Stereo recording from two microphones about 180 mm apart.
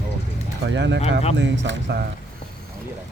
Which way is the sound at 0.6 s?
80° right.